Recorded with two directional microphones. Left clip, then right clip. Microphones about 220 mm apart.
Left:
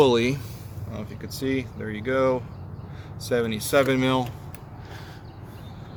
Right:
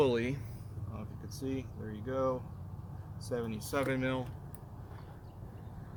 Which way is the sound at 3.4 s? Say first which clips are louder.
Left 14 dB; 35° left (ahead or behind).